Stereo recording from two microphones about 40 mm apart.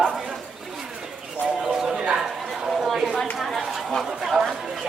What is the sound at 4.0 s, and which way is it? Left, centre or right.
Chatter, centre.